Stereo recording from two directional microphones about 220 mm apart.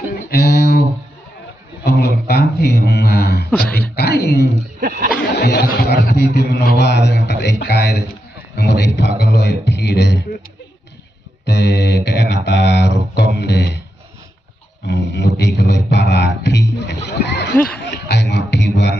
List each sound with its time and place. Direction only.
0.3 s a sound: 50° left (ahead or behind)
3.6 s a man's voice: 45° left (ahead or behind)
4.8 s speech: 40° right (ahead or behind)
5.1 s a man's voice: 50° left (ahead or behind)
11.4 s mantra: 50° left (ahead or behind)
14.8 s mantra: 50° left (ahead or behind)
17.2 s a sound: 50° left (ahead or behind)
17.7 s music: 50° left (ahead or behind)